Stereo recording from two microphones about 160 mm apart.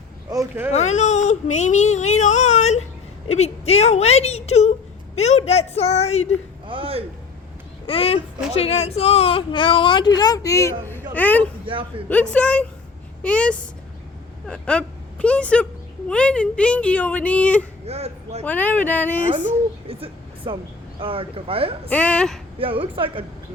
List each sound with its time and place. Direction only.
0.3 s speech: 20° right (ahead or behind)
0.7 s a woman's voice: 45° left (ahead or behind)
6.7 s a sound: 35° right (ahead or behind)
7.9 s a woman's voice: 35° left (ahead or behind); by 11.4 s 10° left (ahead or behind)
11.6 s speech: 35° right (ahead or behind)
12.0 s speech: 10° left (ahead or behind)
17.8 s speech: 40° right (ahead or behind)
18.4 s speech: 10° left (ahead or behind)
19.9 s speech: 35° right (ahead or behind)
21.8 s speech: 10° left (ahead or behind)
22.5 s speech: 35° right (ahead or behind)